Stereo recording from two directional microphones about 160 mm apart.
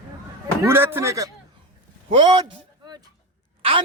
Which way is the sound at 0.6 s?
15° right (ahead or behind).